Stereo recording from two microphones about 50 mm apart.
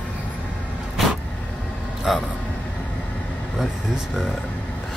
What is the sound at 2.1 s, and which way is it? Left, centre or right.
Speech, centre.